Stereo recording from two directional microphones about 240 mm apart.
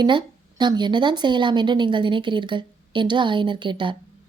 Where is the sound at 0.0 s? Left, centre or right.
Centre.